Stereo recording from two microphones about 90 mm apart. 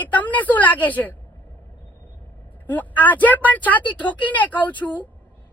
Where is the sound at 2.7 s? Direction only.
20° left (ahead or behind).